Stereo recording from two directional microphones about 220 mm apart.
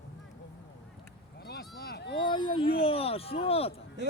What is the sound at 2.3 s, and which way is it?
Speech, 25° left (ahead or behind).